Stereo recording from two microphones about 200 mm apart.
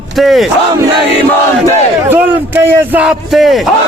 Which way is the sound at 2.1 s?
10° right (ahead or behind).